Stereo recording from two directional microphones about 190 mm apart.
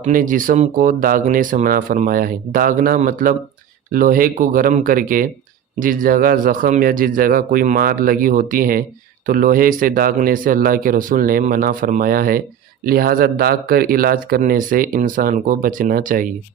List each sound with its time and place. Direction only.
0.0 s speech: 45° right (ahead or behind)